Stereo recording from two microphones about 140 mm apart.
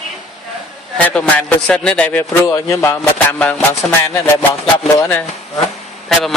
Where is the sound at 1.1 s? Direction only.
10° left (ahead or behind).